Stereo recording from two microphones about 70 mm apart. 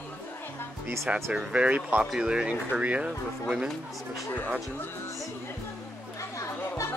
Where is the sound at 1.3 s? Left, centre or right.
Centre.